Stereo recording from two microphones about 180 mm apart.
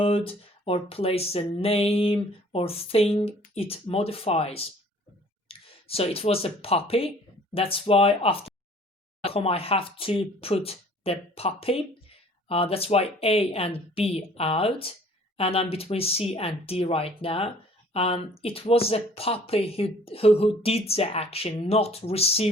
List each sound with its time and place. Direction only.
0.0 s speech: 30° left (ahead or behind)